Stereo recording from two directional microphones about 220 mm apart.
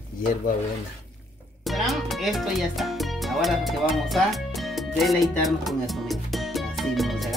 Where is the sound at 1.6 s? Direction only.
Centre (ahead or behind).